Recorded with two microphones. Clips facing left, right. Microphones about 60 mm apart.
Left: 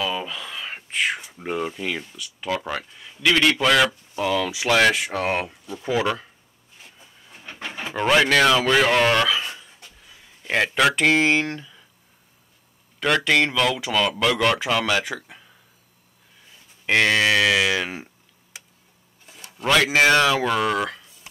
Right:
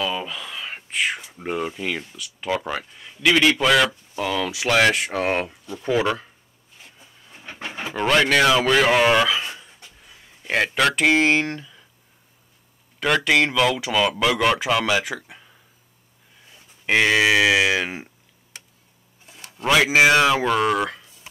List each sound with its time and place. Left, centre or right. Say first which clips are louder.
0.0 s speech: even; centre
6.8 s a sound: even; centre
7.9 s speech: even; centre
13.0 s speech: right 1 dB; centre
16.8 s speech: right 1 dB; centre
19.2 s speech: right 1 dB; centre